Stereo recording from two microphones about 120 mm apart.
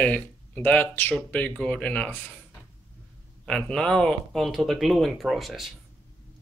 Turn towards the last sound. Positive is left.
turn(degrees=0)  # may be behind; listen again after turning